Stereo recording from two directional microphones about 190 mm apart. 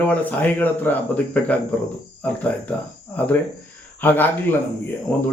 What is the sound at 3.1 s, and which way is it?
Speech, 10° left (ahead or behind).